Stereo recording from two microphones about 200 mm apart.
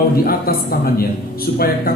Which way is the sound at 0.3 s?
50° left (ahead or behind).